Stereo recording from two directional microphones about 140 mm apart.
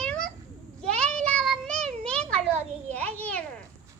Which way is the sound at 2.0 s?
10° left (ahead or behind).